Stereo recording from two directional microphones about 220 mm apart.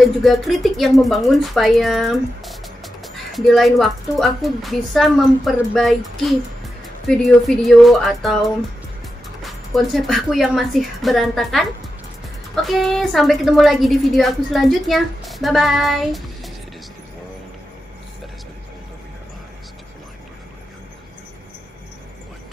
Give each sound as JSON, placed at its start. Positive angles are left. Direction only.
{"t": 0.2, "sound": "speech", "side_deg": 0}
{"t": 9.4, "sound": "speech", "side_deg": 0}
{"t": 12.6, "sound": "speech", "side_deg": 0}